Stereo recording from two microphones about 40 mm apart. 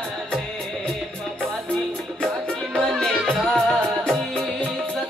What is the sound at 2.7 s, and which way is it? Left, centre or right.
Music, centre.